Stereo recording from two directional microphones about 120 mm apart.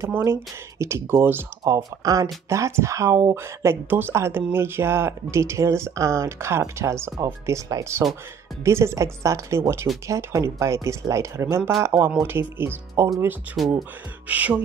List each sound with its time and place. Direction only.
0.0 s speech: 25° right (ahead or behind)
1.6 s speech: 35° right (ahead or behind)
14.2 s music: 10° right (ahead or behind)